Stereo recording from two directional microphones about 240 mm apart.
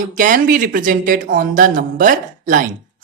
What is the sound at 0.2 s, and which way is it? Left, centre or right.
Speech, right.